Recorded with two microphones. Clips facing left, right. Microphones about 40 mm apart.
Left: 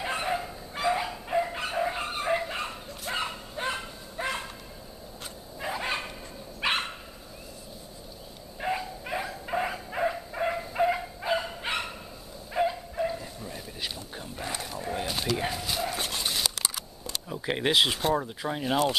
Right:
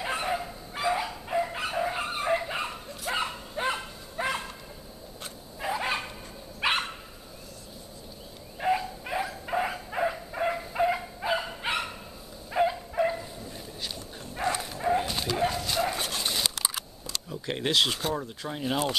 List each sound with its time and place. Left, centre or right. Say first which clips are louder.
0.0 s bow-wow: even; centre
5.6 s dog: right 2 dB; centre
8.5 s bow-wow: right 4 dB; centre
12.5 s dog: right 2 dB; centre
12.9 s bow-wow: right 3 dB; centre
13.4 s duck: left 2 dB; centre
14.4 s bow-wow: right 6 dB; centre
15.0 s dog: right 1 dB; centre
15.4 s bow-wow: right 3 dB; centre
16.1 s dog: even; centre
17.1 s speech: left 2 dB; centre